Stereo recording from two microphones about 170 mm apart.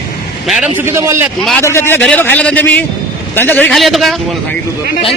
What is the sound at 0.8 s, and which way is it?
Speech, 15° right (ahead or behind).